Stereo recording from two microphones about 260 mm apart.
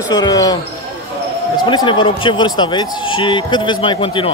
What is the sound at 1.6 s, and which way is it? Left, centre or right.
Speech, centre.